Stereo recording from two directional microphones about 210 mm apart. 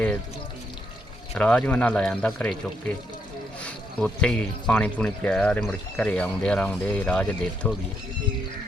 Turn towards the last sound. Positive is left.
turn(degrees=5)  # may be behind; listen again after turning